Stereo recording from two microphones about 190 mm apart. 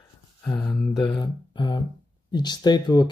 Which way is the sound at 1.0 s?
25° left (ahead or behind).